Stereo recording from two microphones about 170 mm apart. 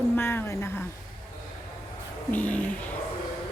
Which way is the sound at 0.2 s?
15° left (ahead or behind).